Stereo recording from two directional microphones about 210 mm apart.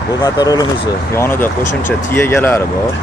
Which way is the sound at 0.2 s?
15° left (ahead or behind).